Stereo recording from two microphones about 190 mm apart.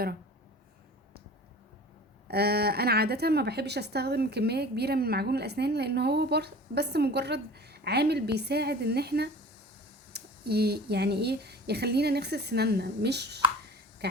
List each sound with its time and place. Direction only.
2.2 s a woman's voice: 55° right (ahead or behind)